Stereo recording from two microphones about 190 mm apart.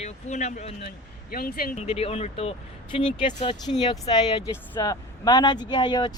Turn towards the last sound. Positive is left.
turn(degrees=20)  # may be behind; listen again after turning